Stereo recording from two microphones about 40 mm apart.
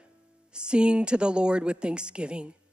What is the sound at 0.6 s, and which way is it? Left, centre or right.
A woman's voice, right.